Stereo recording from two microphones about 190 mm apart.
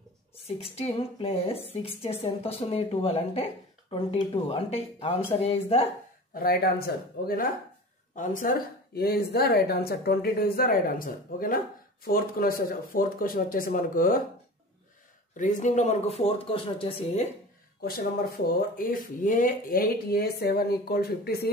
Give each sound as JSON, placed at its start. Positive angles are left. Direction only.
{"t": 0.5, "sound": "a woman's voice", "side_deg": 30}
{"t": 6.3, "sound": "speech", "side_deg": 50}
{"t": 8.2, "sound": "speech", "side_deg": 45}
{"t": 15.3, "sound": "a woman's voice", "side_deg": 40}
{"t": 17.8, "sound": "speech", "side_deg": 50}